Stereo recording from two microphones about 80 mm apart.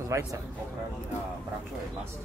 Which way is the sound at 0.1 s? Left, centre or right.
Right.